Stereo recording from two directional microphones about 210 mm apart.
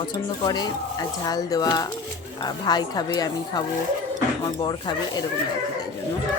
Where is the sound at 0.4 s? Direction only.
20° left (ahead or behind).